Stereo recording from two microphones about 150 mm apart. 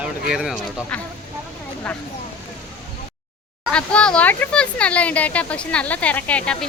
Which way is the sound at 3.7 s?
5° left (ahead or behind).